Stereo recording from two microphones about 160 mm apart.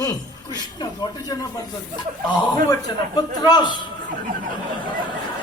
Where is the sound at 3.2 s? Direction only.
25° left (ahead or behind).